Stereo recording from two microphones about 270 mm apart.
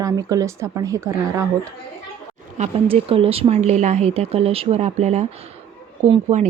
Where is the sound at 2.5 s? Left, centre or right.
Right.